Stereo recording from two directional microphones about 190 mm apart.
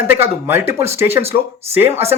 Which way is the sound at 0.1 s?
10° right (ahead or behind).